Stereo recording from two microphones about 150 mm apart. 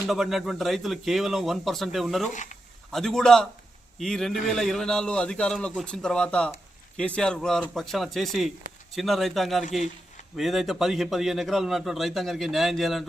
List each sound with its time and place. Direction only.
0.1 s a man's voice: centre (ahead or behind)
2.3 s speech: 55° left (ahead or behind)
2.9 s a man's voice: centre (ahead or behind)